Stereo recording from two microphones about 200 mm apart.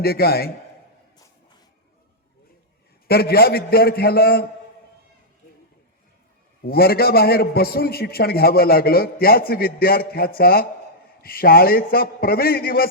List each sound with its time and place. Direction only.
0.0 s a man's voice: 50° left (ahead or behind)
3.1 s a man's voice: 50° left (ahead or behind)
6.7 s a man's voice: 50° left (ahead or behind)